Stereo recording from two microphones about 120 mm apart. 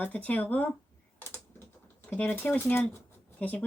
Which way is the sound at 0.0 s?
10° left (ahead or behind).